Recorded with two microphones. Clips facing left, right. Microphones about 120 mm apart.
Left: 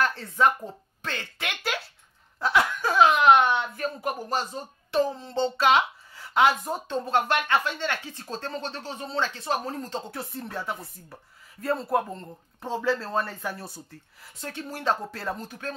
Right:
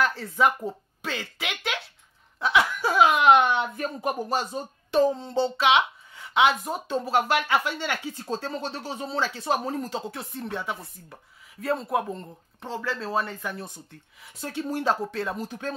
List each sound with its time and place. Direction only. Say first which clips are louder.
0.0 s speech: even; centre (ahead or behind)
2.4 s chuckle: right 1 dB; centre (ahead or behind)
2.9 s a woman's voice: even; 15° right (ahead or behind)
5.6 s a woman's voice: left 1 dB; centre (ahead or behind)
9.4 s a woman's voice: right 3 dB; 20° right (ahead or behind)
10.0 s speech: right 1 dB; centre (ahead or behind)
12.6 s speech: left 5 dB; 15° left (ahead or behind)
13.0 s speech: right 1 dB; centre (ahead or behind)
14.4 s a woman's voice: right 4 dB; 15° right (ahead or behind)
15.0 s speech: right 2 dB; 5° left (ahead or behind)